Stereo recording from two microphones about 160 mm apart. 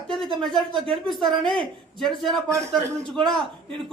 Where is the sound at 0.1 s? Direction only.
Centre (ahead or behind).